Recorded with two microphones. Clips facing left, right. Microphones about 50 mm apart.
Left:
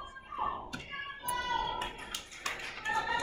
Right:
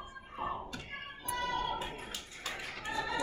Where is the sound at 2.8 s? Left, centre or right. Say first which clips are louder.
Left 5 dB; left.